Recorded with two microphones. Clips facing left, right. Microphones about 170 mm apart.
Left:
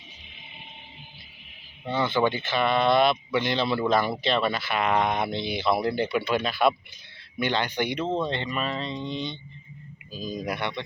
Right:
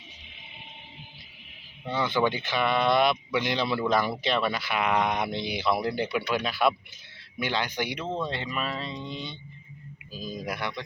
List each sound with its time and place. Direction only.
2.1 s speech: 15° right (ahead or behind)
8.0 s speech: 25° left (ahead or behind)
8.3 s speech: 5° right (ahead or behind)